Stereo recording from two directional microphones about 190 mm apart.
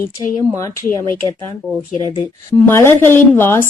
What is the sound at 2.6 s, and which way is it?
A woman's voice, 10° left (ahead or behind).